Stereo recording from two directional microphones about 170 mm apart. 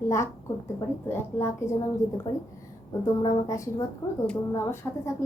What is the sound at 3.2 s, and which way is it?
A woman's voice, 20° left (ahead or behind).